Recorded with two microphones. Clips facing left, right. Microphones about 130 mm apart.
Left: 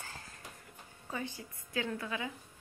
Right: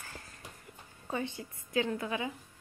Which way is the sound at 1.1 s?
25° right (ahead or behind).